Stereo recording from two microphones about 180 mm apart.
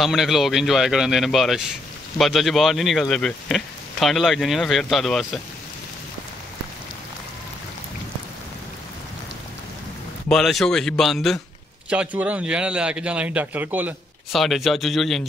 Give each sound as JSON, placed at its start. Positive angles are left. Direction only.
{"t": 0.0, "sound": "speech", "side_deg": 0}
{"t": 10.3, "sound": "speech", "side_deg": 0}